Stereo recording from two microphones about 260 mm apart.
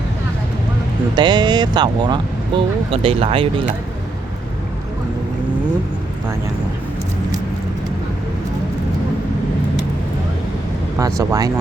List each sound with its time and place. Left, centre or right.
1.1 s speech: centre
10.9 s speech: centre